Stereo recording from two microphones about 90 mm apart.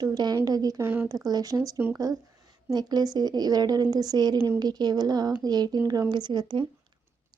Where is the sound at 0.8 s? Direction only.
20° right (ahead or behind).